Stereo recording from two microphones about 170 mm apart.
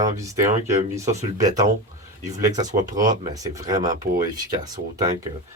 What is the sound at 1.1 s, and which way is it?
Speech, 45° right (ahead or behind).